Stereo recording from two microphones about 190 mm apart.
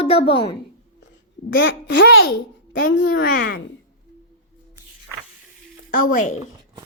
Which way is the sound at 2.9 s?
55° left (ahead or behind).